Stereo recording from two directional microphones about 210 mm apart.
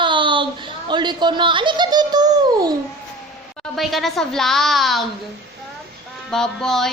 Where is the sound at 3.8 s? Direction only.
Centre (ahead or behind).